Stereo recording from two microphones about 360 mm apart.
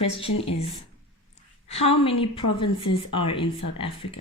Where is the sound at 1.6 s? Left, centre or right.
Centre.